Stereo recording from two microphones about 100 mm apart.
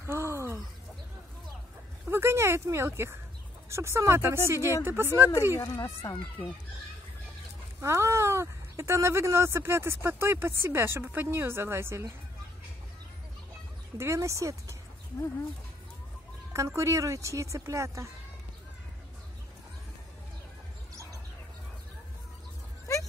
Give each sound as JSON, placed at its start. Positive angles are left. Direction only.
{"t": 0.0, "sound": "a sound", "side_deg": -25}
{"t": 2.0, "sound": "speech", "side_deg": -25}
{"t": 5.6, "sound": "speech", "side_deg": 30}
{"t": 7.8, "sound": "speech", "side_deg": -25}
{"t": 13.9, "sound": "speech", "side_deg": -30}
{"t": 16.5, "sound": "speech", "side_deg": -30}
{"t": 22.9, "sound": "a sound", "side_deg": 30}